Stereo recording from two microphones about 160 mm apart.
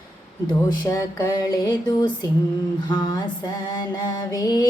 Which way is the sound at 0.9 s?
20° left (ahead or behind).